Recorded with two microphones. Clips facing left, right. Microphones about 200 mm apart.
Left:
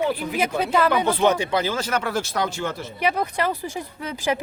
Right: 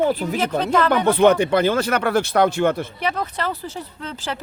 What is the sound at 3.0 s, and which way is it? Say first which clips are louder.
Speech: left 7 dB; 10° left (ahead or behind).